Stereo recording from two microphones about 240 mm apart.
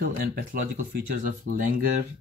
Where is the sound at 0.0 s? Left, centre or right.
Right.